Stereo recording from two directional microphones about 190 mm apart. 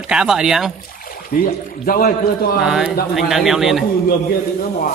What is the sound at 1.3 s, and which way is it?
Speech, 50° left (ahead or behind).